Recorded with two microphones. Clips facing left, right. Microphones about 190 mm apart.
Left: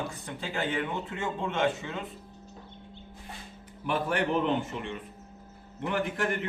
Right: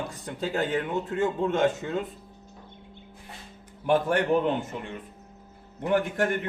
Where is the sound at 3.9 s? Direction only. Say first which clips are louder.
Right 6 dB; 45° right (ahead or behind).